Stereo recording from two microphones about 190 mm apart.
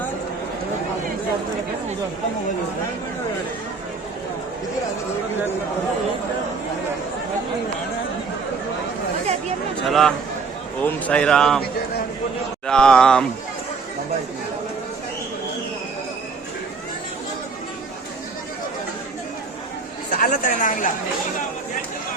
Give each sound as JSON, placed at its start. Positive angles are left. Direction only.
{"t": 9.8, "sound": "a man's voice", "side_deg": 0}
{"t": 12.6, "sound": "a man's voice", "side_deg": 5}
{"t": 20.1, "sound": "speech", "side_deg": 50}